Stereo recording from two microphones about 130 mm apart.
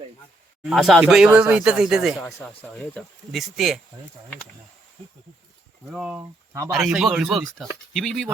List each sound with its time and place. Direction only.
0.6 s speech: centre (ahead or behind)
3.3 s speech: centre (ahead or behind)
5.9 s speech: 5° right (ahead or behind)
6.1 s speech: 20° right (ahead or behind)
6.7 s speech: 5° right (ahead or behind)